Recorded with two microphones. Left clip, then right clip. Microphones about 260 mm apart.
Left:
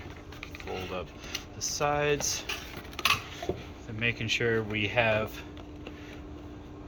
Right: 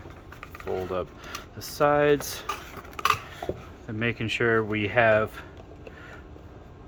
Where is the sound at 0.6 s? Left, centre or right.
Right.